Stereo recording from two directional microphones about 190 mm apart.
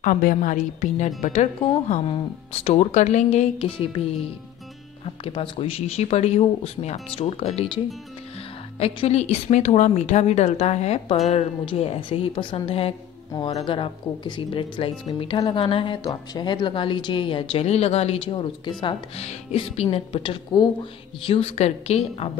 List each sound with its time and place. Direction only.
0.0 s a woman's voice: 45° left (ahead or behind)
5.2 s a woman's voice: 30° left (ahead or behind)